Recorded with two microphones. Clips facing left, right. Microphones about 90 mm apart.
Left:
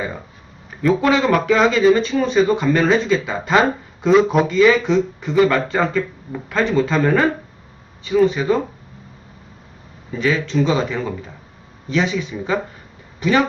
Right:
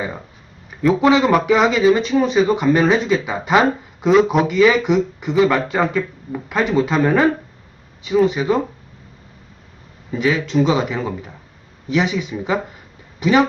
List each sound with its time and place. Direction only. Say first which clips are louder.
1.0 s speech: right 3 dB; 20° right (ahead or behind)
10.1 s speech: right 1 dB; 15° right (ahead or behind)